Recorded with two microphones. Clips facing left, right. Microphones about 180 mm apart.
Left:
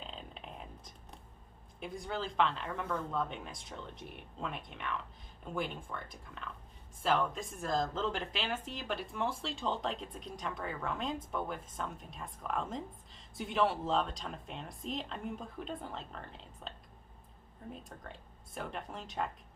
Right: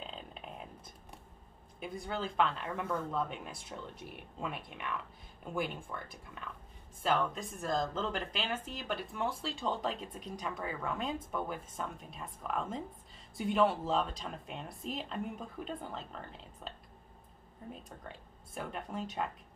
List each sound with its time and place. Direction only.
0.0 s a sound: centre (ahead or behind)
1.8 s speech: 5° right (ahead or behind)
17.8 s speech: centre (ahead or behind)